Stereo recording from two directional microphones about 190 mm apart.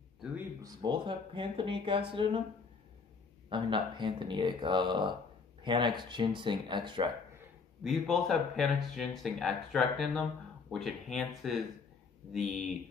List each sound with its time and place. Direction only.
0.6 s speech: 20° right (ahead or behind)
3.4 s speech: 25° right (ahead or behind)
7.8 s speech: centre (ahead or behind)